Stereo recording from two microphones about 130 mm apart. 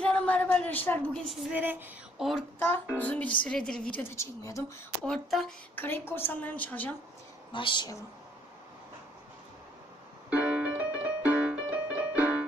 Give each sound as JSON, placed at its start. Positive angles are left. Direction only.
{"t": 0.0, "sound": "a sound", "side_deg": 10}
{"t": 1.5, "sound": "a sound", "side_deg": -15}
{"t": 2.1, "sound": "a woman's voice", "side_deg": 0}
{"t": 2.6, "sound": "a woman's voice", "side_deg": 15}
{"t": 4.0, "sound": "a woman's voice", "side_deg": 20}
{"t": 5.0, "sound": "speech", "side_deg": 5}
{"t": 5.8, "sound": "a woman's voice", "side_deg": 15}
{"t": 7.5, "sound": "speech", "side_deg": 40}
{"t": 10.3, "sound": "music", "side_deg": -10}